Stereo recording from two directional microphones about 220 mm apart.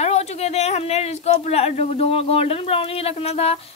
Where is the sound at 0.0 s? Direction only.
30° left (ahead or behind).